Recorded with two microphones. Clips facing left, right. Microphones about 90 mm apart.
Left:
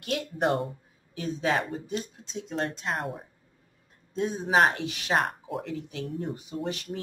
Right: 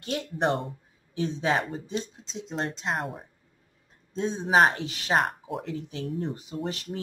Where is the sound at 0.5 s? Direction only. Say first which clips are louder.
Left 2 dB; centre (ahead or behind).